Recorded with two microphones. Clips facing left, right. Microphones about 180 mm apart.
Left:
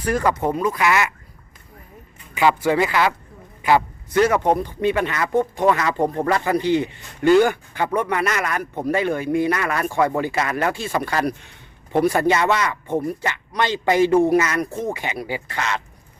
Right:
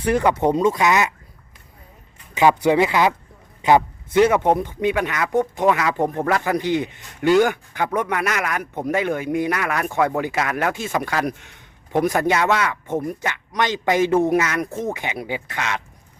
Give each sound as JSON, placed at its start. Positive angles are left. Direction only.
{"t": 0.0, "sound": "speech", "side_deg": -15}
{"t": 2.3, "sound": "a man's voice", "side_deg": -20}
{"t": 5.9, "sound": "speech", "side_deg": 20}
{"t": 6.2, "sound": "a man's voice", "side_deg": -10}
{"t": 9.5, "sound": "speech", "side_deg": -5}
{"t": 10.8, "sound": "a man's voice", "side_deg": -15}
{"t": 11.1, "sound": "speech", "side_deg": 0}
{"t": 11.9, "sound": "a man's voice", "side_deg": -15}
{"t": 14.3, "sound": "speech", "side_deg": -5}
{"t": 14.7, "sound": "speech", "side_deg": 15}
{"t": 14.9, "sound": "a man's voice", "side_deg": -15}